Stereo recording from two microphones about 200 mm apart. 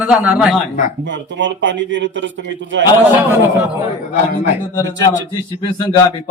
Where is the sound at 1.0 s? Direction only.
65° right (ahead or behind).